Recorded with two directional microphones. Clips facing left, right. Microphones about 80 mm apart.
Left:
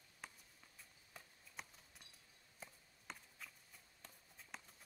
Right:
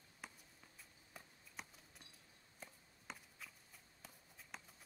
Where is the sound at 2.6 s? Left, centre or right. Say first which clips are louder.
Even; centre.